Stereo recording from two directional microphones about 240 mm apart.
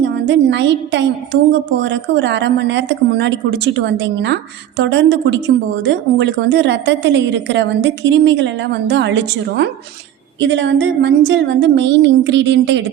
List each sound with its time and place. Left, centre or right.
0.0 s a woman's voice: right